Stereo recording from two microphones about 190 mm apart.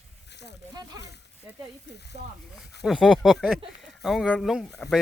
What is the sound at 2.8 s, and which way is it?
Speech, centre (ahead or behind).